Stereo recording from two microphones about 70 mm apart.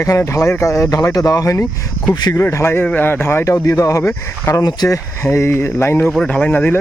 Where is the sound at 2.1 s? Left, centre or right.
Left.